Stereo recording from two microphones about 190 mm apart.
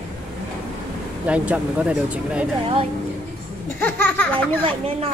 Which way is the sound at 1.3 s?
5° right (ahead or behind).